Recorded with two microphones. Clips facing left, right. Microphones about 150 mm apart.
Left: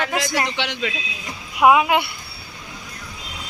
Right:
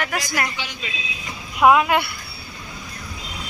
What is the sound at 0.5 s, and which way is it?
Speech, 75° left (ahead or behind).